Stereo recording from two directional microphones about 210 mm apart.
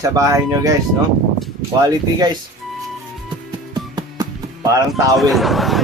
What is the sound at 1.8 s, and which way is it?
Speech, 20° right (ahead or behind).